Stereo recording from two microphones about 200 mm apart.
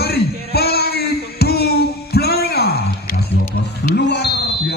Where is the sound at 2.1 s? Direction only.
50° left (ahead or behind).